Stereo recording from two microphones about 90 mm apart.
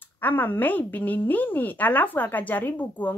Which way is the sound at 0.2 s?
20° left (ahead or behind).